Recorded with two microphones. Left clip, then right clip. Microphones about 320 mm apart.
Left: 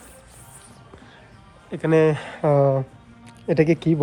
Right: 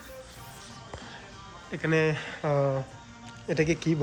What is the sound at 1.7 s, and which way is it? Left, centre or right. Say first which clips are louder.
Speech: left 8 dB; centre.